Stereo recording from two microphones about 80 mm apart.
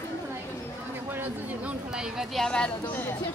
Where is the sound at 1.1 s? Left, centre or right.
Right.